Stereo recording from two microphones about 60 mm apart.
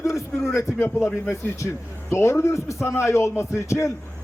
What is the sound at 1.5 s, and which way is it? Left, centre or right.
A man's voice, left.